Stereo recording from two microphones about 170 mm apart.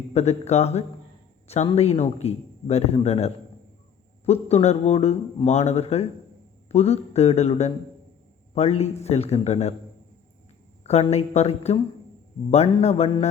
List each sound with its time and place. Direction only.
0.1 s speech: 40° left (ahead or behind)
10.8 s speech: 40° left (ahead or behind)